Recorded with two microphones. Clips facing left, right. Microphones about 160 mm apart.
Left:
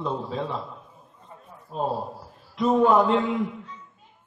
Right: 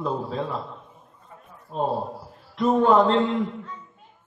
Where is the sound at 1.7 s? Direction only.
5° left (ahead or behind).